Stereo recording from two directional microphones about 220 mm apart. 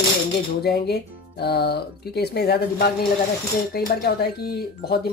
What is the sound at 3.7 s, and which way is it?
Speech, 45° left (ahead or behind).